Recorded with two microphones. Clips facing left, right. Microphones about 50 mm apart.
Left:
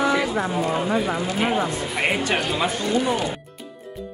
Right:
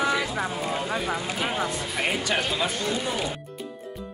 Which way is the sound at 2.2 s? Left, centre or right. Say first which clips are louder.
Left 3 dB; left.